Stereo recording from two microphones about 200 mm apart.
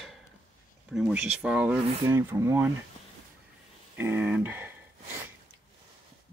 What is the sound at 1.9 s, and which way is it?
Speech, 15° right (ahead or behind).